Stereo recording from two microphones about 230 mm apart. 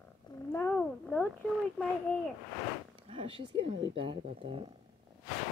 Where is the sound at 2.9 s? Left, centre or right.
Right.